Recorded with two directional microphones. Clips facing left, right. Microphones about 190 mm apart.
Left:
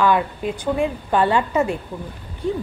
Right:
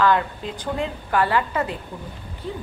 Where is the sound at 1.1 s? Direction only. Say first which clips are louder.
Left 2 dB; 25° left (ahead or behind).